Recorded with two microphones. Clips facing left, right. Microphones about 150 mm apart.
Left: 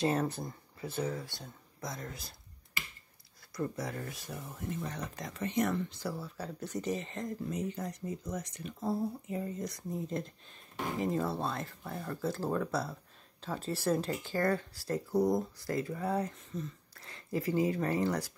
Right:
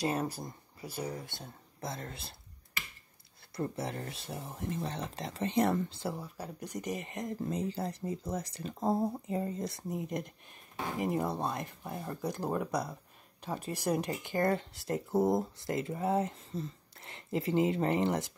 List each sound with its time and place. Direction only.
0.0 s speech: 10° right (ahead or behind); by 2.3 s 30° right (ahead or behind)
3.5 s speech: 30° right (ahead or behind)
7.4 s speech: 30° right (ahead or behind)
9.9 s speech: 15° right (ahead or behind)